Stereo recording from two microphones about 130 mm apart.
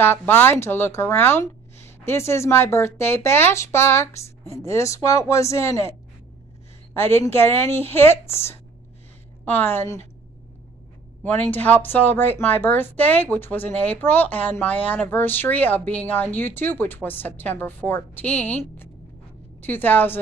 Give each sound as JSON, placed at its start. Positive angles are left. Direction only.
{"t": 0.0, "sound": "speech", "side_deg": 15}
{"t": 9.4, "sound": "speech", "side_deg": 15}
{"t": 11.2, "sound": "speech", "side_deg": 15}
{"t": 19.6, "sound": "speech", "side_deg": 15}